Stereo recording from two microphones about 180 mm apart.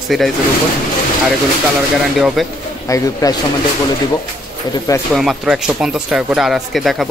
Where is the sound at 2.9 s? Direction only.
20° left (ahead or behind).